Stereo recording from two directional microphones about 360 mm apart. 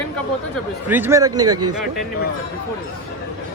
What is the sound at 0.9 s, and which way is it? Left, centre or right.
Speech, centre.